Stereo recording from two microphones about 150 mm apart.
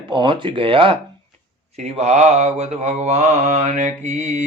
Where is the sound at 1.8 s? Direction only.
45° right (ahead or behind).